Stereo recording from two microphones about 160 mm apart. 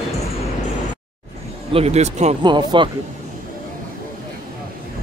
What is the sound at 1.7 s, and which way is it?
Speech, 40° right (ahead or behind).